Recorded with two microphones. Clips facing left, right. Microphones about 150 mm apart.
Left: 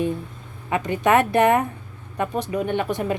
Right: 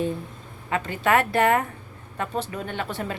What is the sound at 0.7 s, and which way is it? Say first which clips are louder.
A woman's voice: left 3 dB; 20° left (ahead or behind).